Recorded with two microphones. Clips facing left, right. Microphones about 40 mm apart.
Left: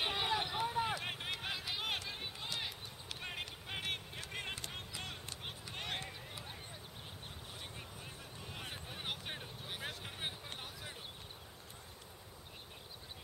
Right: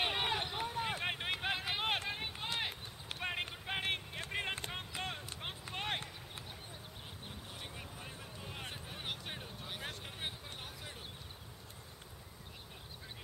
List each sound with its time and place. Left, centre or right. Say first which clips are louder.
0.0 s run: right 1 dB; centre
0.4 s run: left 2 dB; centre
0.9 s run: right 3 dB; right
7.7 s a sound: right 2 dB; centre